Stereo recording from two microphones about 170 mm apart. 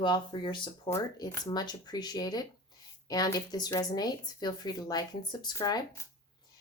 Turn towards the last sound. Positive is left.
turn(degrees=25)  # may be behind; listen again after turning